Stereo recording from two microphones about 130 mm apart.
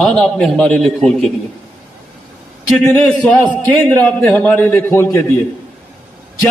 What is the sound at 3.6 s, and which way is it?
A man's voice, 15° left (ahead or behind).